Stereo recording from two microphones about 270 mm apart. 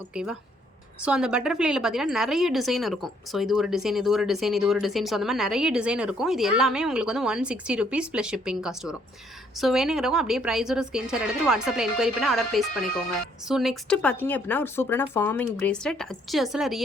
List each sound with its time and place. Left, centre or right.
0.1 s a woman's voice: centre